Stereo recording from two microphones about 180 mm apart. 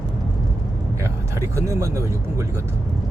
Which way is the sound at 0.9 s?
15° right (ahead or behind).